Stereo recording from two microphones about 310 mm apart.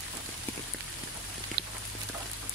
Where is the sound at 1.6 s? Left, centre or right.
Right.